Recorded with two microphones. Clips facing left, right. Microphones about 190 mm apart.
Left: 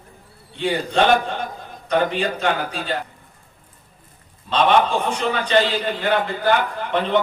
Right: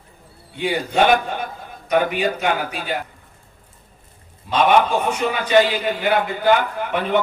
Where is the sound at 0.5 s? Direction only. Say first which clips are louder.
Even; 10° right (ahead or behind).